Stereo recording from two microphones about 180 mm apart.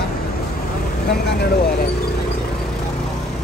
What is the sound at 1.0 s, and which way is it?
Speech, 65° left (ahead or behind).